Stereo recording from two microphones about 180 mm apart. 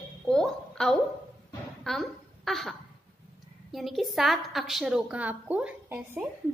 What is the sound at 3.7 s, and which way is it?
A woman's voice, centre (ahead or behind).